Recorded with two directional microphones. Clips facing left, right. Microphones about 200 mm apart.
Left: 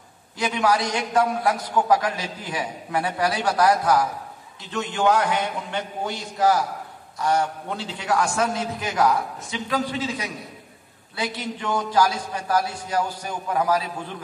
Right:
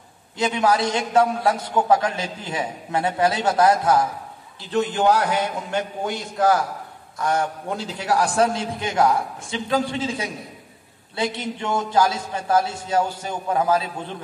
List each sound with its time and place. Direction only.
0.4 s a man's voice: 25° right (ahead or behind)
11.6 s a man's voice: 25° right (ahead or behind)